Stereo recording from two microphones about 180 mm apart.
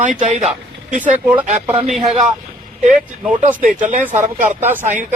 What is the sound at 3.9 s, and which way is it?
Speech, 45° right (ahead or behind).